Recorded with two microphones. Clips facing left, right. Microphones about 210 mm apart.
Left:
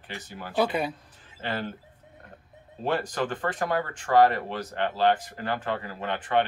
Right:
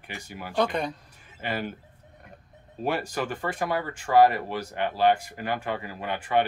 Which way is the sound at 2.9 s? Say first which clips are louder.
Left 1 dB; 10° right (ahead or behind).